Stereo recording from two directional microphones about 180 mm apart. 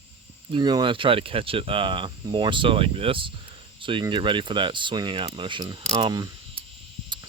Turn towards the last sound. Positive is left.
turn(degrees=-20)  # may be behind; listen again after turning